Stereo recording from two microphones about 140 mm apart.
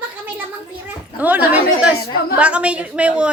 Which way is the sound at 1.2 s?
10° right (ahead or behind).